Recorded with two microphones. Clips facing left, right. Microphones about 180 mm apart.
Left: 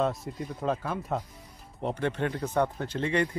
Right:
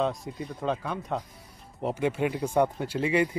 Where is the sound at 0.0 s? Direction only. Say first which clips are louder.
Even; centre (ahead or behind).